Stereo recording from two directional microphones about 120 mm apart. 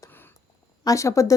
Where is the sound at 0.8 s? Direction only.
25° left (ahead or behind).